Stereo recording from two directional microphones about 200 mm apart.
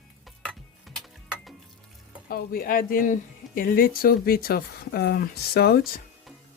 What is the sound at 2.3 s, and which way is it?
Speech, 45° left (ahead or behind).